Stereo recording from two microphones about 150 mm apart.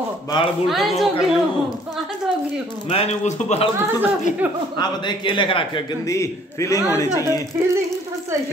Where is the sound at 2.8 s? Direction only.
40° left (ahead or behind).